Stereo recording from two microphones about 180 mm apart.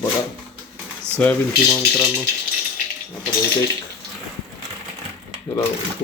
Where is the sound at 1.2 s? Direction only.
10° left (ahead or behind).